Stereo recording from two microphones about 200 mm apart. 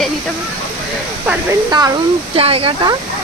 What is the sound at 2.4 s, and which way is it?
Speech, 30° right (ahead or behind).